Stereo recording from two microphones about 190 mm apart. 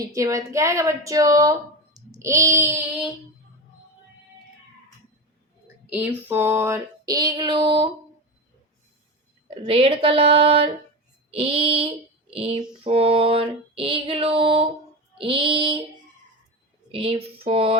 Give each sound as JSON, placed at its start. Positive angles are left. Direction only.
{"t": 0.0, "sound": "a woman's voice", "side_deg": -15}
{"t": 5.8, "sound": "female singing", "side_deg": -10}
{"t": 9.6, "sound": "female singing", "side_deg": -30}
{"t": 16.9, "sound": "female singing", "side_deg": -30}